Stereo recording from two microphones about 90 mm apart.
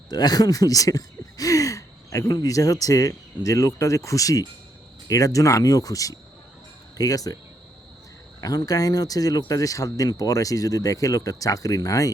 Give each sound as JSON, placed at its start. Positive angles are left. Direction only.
{"t": 0.1, "sound": "speech", "side_deg": 50}
{"t": 8.4, "sound": "speech", "side_deg": 45}